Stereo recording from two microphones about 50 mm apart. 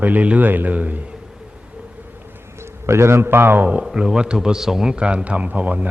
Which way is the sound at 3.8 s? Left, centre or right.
Centre.